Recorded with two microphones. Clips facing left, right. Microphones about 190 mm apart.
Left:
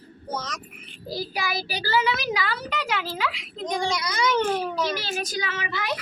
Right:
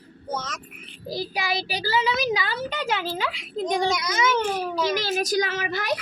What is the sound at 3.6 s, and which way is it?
Speech, 40° right (ahead or behind).